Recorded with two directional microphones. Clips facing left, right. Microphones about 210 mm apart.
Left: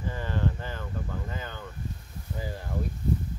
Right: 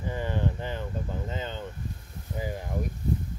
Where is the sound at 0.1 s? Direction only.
15° right (ahead or behind).